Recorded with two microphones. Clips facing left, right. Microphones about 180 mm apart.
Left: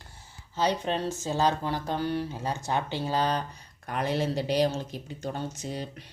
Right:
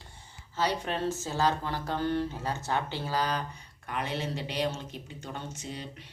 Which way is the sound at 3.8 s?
40° left (ahead or behind).